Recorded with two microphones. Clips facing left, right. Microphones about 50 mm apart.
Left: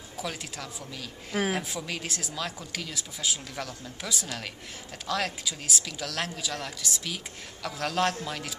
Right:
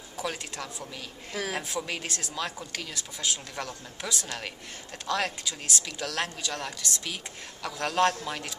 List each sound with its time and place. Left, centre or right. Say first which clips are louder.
0.2 s speech: right 2 dB; centre
1.3 s speech: left 5 dB; left
1.8 s speech: right 1 dB; centre